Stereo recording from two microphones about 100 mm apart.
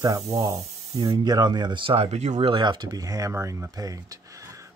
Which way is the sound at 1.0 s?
45° right (ahead or behind).